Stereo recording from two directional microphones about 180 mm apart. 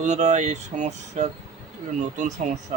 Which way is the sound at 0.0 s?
40° right (ahead or behind).